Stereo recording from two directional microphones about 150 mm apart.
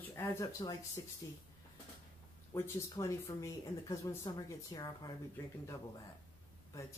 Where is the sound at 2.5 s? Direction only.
20° left (ahead or behind).